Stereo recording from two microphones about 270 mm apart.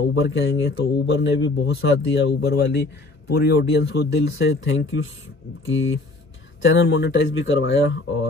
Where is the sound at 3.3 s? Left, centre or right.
Left.